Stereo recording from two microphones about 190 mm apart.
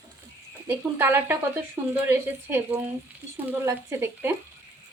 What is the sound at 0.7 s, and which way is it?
Speech, 10° right (ahead or behind).